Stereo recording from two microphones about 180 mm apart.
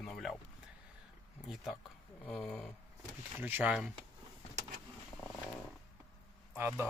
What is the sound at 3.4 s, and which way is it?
Speech, 10° right (ahead or behind).